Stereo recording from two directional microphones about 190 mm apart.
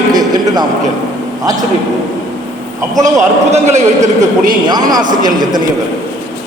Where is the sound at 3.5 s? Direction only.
35° right (ahead or behind).